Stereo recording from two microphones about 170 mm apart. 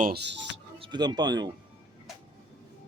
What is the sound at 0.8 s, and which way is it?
Speech, 25° right (ahead or behind).